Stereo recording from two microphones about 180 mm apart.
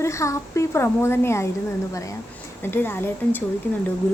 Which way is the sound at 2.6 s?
10° left (ahead or behind).